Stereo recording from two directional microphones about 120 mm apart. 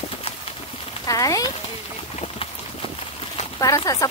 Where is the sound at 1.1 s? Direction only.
30° left (ahead or behind).